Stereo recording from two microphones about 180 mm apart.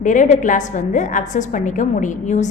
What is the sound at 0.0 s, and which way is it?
A woman's voice, 45° left (ahead or behind).